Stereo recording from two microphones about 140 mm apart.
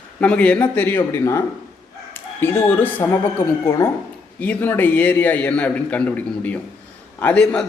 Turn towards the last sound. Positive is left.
turn(degrees=5)  # may be behind; listen again after turning